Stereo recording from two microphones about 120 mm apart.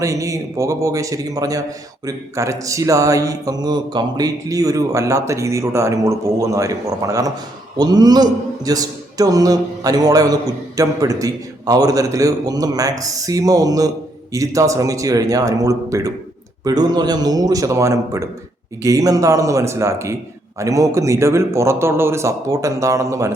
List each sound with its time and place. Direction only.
0.0 s a man's voice: 25° right (ahead or behind)